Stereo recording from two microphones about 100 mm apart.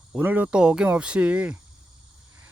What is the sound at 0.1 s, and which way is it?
Speech, 15° right (ahead or behind).